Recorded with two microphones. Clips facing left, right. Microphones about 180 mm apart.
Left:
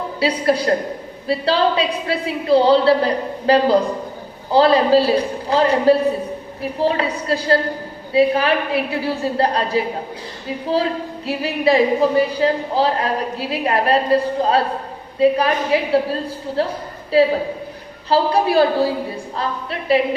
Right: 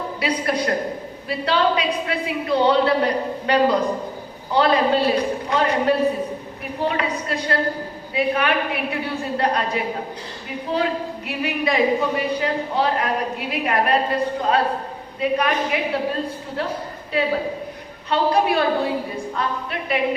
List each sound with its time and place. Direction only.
0.2 s speech: 30° left (ahead or behind)
11.3 s speech: 30° left (ahead or behind)